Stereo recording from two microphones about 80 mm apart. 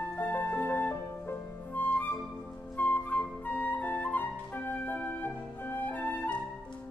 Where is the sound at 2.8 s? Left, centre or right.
Left.